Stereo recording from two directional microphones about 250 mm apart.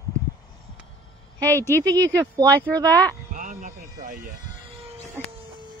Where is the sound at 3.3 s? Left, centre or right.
Right.